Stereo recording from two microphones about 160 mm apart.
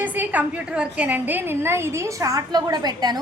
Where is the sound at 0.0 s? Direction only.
10° right (ahead or behind).